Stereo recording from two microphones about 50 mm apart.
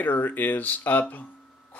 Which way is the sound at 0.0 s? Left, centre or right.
Left.